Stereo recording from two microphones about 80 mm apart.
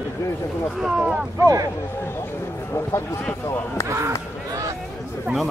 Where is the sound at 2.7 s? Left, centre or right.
Left.